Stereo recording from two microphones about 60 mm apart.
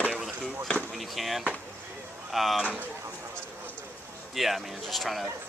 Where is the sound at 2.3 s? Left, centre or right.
Centre.